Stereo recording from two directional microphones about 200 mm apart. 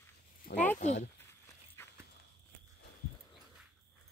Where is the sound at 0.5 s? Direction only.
10° left (ahead or behind).